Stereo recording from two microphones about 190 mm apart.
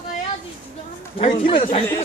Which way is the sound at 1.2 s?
30° left (ahead or behind).